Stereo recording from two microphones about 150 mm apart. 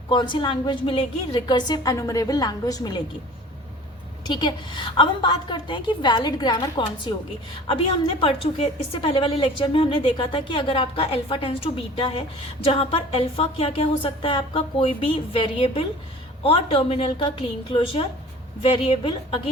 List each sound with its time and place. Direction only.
0.1 s a woman's voice: 30° left (ahead or behind)
4.3 s a woman's voice: 30° left (ahead or behind)
8.2 s a woman's voice: 40° left (ahead or behind)